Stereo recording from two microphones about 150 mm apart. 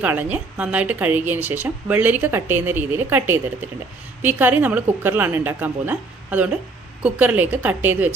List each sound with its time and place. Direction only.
0.0 s a woman's voice: 10° right (ahead or behind)